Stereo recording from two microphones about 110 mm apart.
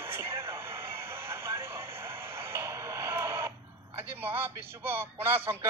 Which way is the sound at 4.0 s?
20° right (ahead or behind).